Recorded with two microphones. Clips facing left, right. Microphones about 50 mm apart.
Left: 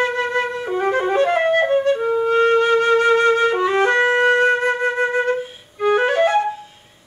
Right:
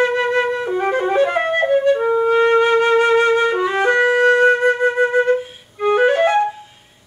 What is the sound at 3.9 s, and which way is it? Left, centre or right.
Music, centre.